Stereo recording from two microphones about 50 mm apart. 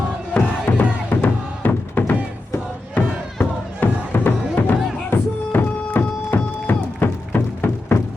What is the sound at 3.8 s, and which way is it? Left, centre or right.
Music, left.